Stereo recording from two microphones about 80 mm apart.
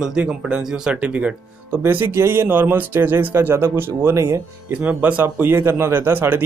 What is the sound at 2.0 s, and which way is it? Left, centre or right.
Speech, right.